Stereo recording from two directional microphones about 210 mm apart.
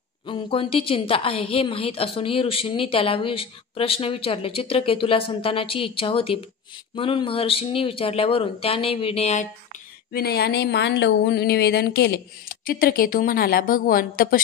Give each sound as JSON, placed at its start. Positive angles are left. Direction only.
{"t": 0.3, "sound": "a woman's voice", "side_deg": 25}
{"t": 10.1, "sound": "a woman's voice", "side_deg": 50}